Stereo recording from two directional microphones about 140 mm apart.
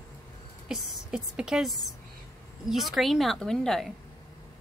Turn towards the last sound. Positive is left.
turn(degrees=5)  # may be behind; listen again after turning